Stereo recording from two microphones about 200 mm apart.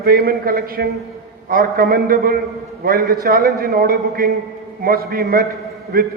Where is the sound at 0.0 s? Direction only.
50° right (ahead or behind).